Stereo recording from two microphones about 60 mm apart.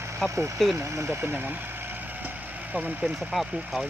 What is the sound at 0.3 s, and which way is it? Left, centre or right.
Speech, right.